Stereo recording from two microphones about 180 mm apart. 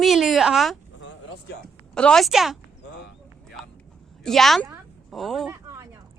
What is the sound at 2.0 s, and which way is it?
Speech, 5° left (ahead or behind).